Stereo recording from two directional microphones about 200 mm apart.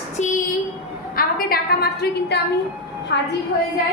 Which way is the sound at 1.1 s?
50° left (ahead or behind).